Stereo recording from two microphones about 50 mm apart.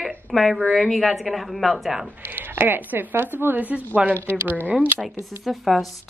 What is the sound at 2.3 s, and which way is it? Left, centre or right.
Speech, right.